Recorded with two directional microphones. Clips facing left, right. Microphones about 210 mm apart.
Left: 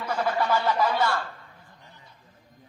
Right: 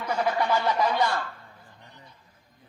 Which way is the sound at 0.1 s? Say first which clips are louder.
Even; 10° right (ahead or behind).